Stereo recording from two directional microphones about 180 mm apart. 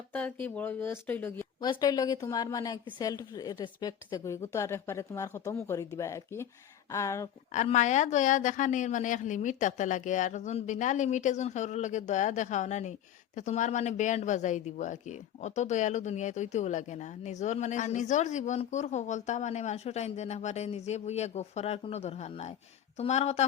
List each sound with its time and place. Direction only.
0.1 s speech: 10° left (ahead or behind)
1.6 s a woman's voice: 20° left (ahead or behind)
7.5 s a woman's voice: 40° left (ahead or behind)